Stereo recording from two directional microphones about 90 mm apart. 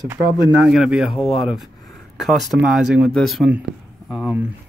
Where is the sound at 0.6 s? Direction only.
10° right (ahead or behind).